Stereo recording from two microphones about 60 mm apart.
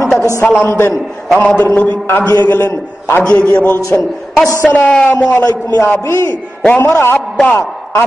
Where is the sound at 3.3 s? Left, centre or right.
Left.